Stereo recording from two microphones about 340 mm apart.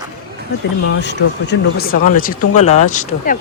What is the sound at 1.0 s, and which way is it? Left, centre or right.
Speech, left.